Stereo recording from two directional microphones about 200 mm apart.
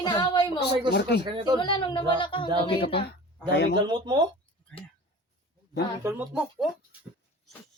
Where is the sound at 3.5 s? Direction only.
55° left (ahead or behind).